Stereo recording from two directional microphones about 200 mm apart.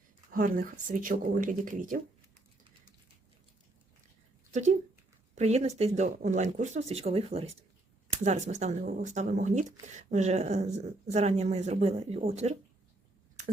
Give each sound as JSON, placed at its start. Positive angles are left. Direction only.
{"t": 0.3, "sound": "speech", "side_deg": -45}
{"t": 5.3, "sound": "speech", "side_deg": -35}